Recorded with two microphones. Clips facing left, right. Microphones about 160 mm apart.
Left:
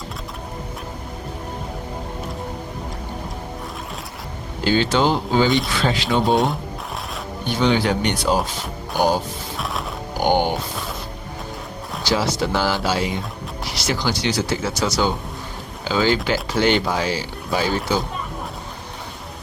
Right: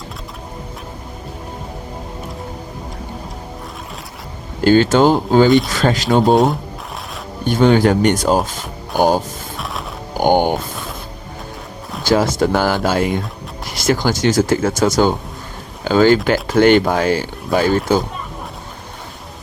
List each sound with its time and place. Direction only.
4.6 s speech: 45° right (ahead or behind)
6.3 s speech: centre (ahead or behind)
7.4 s speech: 45° right (ahead or behind)
9.6 s music: centre (ahead or behind)
10.2 s music: 50° right (ahead or behind)
12.0 s speech: 50° right (ahead or behind)